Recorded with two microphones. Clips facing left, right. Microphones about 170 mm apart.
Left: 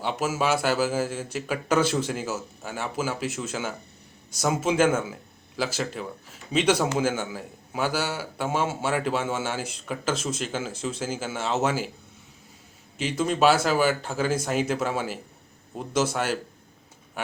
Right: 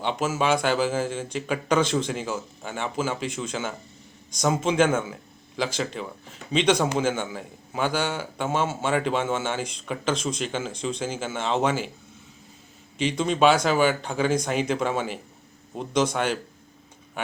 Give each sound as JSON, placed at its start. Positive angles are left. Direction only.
{"t": 0.0, "sound": "a man's voice", "side_deg": 5}
{"t": 13.0, "sound": "a man's voice", "side_deg": 5}